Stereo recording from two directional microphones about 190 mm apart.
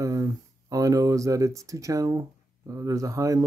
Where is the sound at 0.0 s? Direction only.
15° right (ahead or behind).